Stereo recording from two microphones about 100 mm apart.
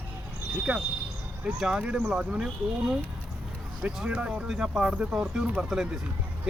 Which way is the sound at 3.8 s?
10° right (ahead or behind).